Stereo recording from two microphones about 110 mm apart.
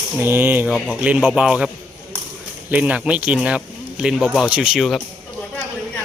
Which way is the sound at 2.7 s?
15° right (ahead or behind).